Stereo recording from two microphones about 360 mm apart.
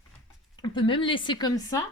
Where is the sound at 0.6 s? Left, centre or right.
Centre.